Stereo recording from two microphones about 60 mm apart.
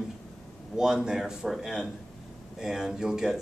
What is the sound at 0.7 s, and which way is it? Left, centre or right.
Speech, centre.